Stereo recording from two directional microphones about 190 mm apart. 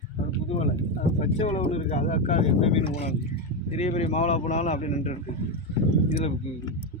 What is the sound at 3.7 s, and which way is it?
A man's voice, 35° left (ahead or behind).